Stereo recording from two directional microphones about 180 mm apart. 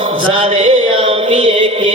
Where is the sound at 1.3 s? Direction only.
30° right (ahead or behind).